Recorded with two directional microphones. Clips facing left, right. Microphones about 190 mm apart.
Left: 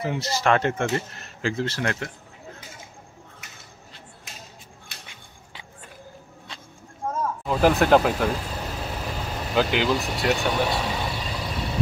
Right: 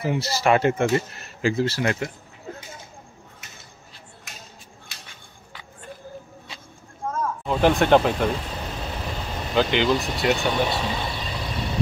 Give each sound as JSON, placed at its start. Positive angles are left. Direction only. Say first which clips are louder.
{"t": 0.0, "sound": "speech", "louder": "right 2 dB", "side_deg": -10}
{"t": 4.9, "sound": "a sound", "louder": "left 1 dB", "side_deg": 60}
{"t": 7.2, "sound": "vehicle", "louder": "even", "side_deg": 0}